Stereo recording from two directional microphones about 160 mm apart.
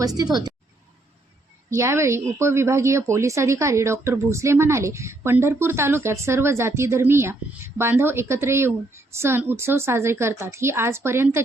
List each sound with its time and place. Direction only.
0.0 s a woman's voice: 25° right (ahead or behind)
1.7 s speech: 15° right (ahead or behind)